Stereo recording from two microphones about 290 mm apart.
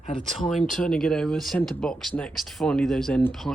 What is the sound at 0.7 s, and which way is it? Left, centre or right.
Speech, centre.